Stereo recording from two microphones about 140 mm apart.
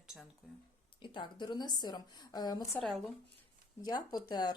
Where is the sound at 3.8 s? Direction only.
30° left (ahead or behind).